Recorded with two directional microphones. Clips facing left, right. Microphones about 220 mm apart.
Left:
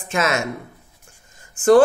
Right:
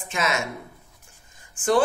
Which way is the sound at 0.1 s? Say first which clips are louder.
Left 5 dB; 50° left (ahead or behind).